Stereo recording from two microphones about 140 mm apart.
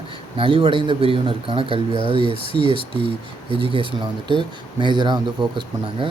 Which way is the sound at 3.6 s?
40° right (ahead or behind).